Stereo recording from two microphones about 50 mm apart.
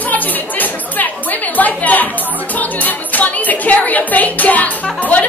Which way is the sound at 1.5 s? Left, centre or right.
Left.